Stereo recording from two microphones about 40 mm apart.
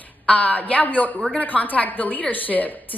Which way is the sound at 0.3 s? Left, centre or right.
Left.